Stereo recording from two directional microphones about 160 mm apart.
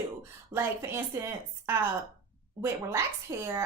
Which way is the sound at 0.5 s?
15° right (ahead or behind).